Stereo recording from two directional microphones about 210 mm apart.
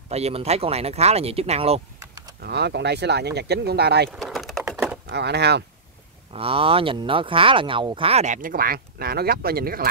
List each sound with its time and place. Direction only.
0.1 s speech: 30° right (ahead or behind)
2.4 s speech: 50° right (ahead or behind)
4.2 s typing: centre (ahead or behind)
5.0 s speech: 50° right (ahead or behind)
6.3 s speech: 25° right (ahead or behind); by 9.8 s 45° right (ahead or behind)